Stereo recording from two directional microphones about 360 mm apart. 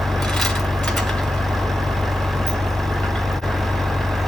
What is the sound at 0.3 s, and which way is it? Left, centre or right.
Vehicle, centre.